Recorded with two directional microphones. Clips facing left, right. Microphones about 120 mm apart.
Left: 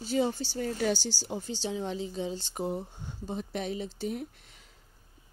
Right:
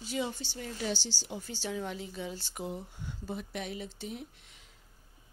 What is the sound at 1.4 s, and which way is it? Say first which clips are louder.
A woman's voice: left 2 dB; 20° left (ahead or behind).